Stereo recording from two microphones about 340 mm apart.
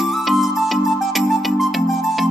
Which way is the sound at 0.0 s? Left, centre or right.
Centre.